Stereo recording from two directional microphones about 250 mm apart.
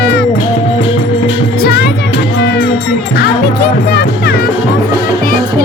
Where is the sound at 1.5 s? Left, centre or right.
Left.